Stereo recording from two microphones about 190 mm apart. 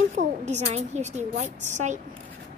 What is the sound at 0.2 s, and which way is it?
A woman's voice, 40° right (ahead or behind).